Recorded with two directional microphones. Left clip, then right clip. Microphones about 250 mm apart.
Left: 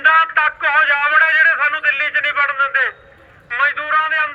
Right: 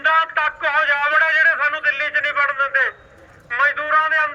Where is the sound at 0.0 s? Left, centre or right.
Centre.